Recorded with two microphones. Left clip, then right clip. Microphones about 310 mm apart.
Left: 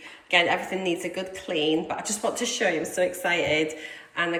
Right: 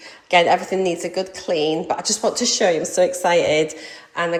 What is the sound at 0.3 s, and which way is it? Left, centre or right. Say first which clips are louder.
A woman's voice: right 7 dB; centre.